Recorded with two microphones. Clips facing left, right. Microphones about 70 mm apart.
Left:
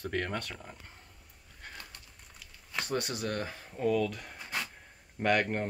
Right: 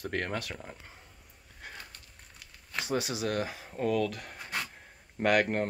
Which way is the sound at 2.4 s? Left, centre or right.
Centre.